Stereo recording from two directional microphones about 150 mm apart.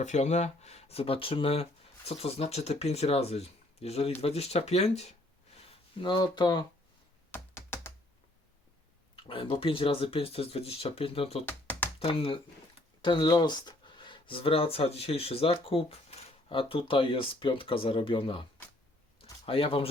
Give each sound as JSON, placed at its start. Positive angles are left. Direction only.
{"t": 0.0, "sound": "speech", "side_deg": 50}
{"t": 6.0, "sound": "speech", "side_deg": 30}
{"t": 7.3, "sound": "computer keyboard", "side_deg": 15}
{"t": 9.1, "sound": "speech", "side_deg": 35}
{"t": 11.4, "sound": "computer keyboard", "side_deg": 10}
{"t": 11.9, "sound": "speech", "side_deg": 35}
{"t": 19.2, "sound": "a sound", "side_deg": 35}